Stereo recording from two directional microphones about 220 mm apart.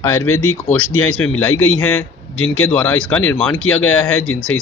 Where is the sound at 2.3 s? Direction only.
70° left (ahead or behind).